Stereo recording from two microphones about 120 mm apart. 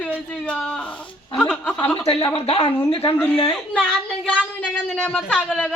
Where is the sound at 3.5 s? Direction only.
10° left (ahead or behind).